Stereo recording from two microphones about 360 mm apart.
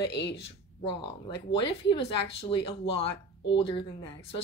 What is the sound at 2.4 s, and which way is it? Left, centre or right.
Speech, centre.